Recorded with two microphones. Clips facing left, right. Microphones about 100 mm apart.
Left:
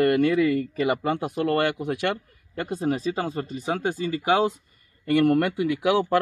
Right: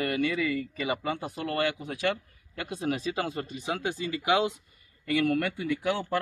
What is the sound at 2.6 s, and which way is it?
Speech, 40° left (ahead or behind).